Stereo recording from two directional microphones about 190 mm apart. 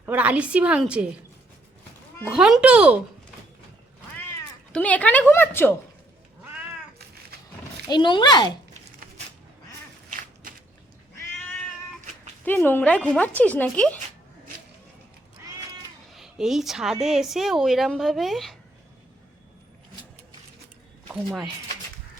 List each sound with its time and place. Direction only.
0.0 s a woman's voice: 10° right (ahead or behind)
2.3 s a child's voice: 5° right (ahead or behind)
4.1 s speech: 10° left (ahead or behind)
7.9 s a child's voice: 25° left (ahead or behind)
10.1 s walk: 45° right (ahead or behind)
12.5 s a woman's voice: 10° left (ahead or behind)
16.1 s a woman's voice: centre (ahead or behind)